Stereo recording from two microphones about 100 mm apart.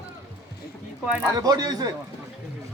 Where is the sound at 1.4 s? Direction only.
40° right (ahead or behind).